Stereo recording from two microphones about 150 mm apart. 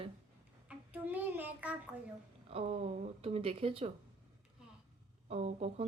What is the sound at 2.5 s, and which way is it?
Speech, 45° right (ahead or behind).